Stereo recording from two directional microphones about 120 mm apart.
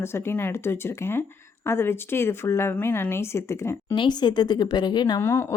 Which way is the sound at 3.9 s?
40° left (ahead or behind).